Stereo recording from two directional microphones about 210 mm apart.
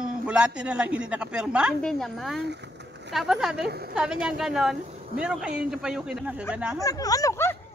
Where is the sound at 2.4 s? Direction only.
55° right (ahead or behind).